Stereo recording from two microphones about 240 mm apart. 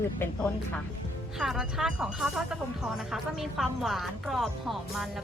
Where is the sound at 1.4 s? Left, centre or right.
Centre.